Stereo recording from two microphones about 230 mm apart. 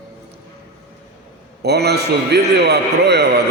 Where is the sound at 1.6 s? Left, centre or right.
Right.